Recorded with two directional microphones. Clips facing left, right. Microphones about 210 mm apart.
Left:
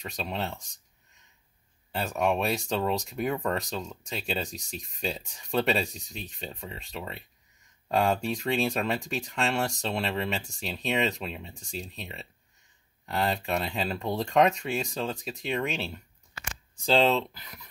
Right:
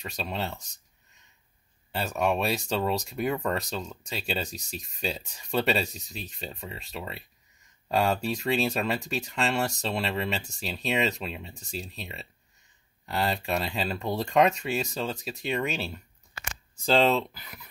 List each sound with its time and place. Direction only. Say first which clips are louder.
0.0 s speech: even; centre (ahead or behind)
2.0 s speech: even; centre (ahead or behind)